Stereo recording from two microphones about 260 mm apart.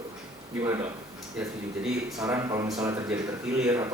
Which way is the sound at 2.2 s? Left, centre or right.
Centre.